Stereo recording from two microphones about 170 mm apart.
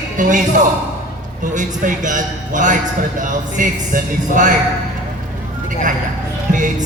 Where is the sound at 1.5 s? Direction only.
50° right (ahead or behind).